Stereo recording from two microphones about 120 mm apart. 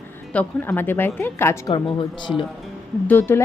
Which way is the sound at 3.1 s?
15° left (ahead or behind).